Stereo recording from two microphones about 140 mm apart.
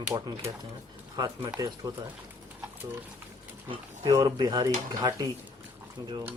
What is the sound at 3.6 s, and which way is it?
Speech, 30° right (ahead or behind).